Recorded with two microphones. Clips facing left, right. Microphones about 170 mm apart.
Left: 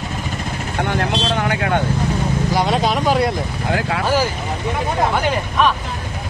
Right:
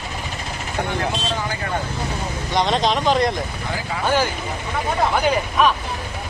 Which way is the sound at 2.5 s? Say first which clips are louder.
Even; 10° left (ahead or behind).